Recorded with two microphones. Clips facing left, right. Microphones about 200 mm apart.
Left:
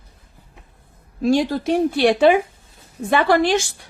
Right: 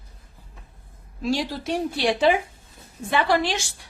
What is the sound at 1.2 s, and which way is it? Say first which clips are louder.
A woman's voice: left 8 dB; 50° left (ahead or behind).